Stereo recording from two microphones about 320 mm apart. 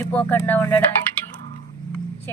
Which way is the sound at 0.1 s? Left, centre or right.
Centre.